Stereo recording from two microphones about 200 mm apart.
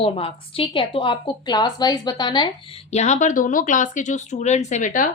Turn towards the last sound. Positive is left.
turn(degrees=40)  # may be behind; listen again after turning